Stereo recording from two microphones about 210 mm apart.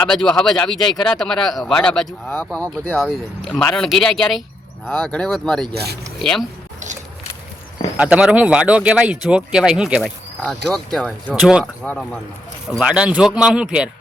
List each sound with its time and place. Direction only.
0.0 s speech: 5° left (ahead or behind)
5.7 s speech: 50° right (ahead or behind)
7.9 s speech: 5° right (ahead or behind)